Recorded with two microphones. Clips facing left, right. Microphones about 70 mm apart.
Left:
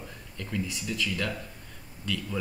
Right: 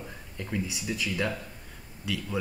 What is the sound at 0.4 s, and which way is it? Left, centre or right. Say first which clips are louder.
Speech: even; centre.